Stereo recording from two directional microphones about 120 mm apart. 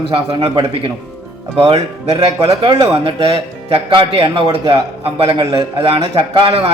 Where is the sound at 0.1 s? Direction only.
40° right (ahead or behind).